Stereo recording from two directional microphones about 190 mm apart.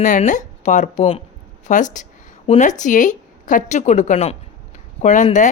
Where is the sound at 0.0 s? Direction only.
40° left (ahead or behind).